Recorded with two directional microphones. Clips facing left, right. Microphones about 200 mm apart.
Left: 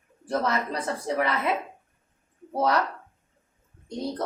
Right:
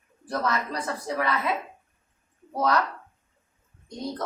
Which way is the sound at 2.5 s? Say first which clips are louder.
Left 1 dB; 25° left (ahead or behind).